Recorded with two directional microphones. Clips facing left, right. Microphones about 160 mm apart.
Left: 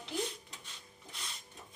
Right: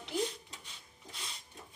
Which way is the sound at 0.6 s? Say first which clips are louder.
Even; 10° right (ahead or behind).